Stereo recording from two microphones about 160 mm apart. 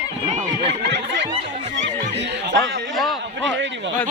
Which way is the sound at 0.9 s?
90° right.